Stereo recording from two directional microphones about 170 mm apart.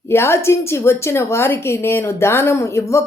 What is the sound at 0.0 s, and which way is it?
A woman's voice, 15° left (ahead or behind).